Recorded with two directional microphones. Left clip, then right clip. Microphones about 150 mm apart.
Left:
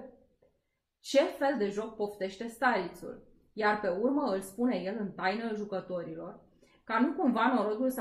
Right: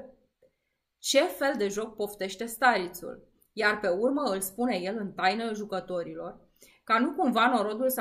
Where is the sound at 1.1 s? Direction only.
20° right (ahead or behind).